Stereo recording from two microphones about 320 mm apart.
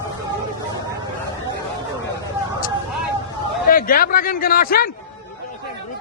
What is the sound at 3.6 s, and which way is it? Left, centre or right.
A man's voice, left.